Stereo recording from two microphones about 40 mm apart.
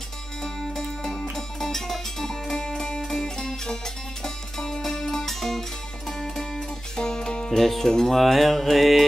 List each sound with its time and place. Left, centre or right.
0.4 s music: centre